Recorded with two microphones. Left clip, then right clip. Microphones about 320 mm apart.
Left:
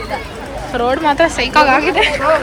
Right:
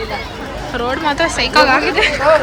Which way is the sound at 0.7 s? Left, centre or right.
Centre.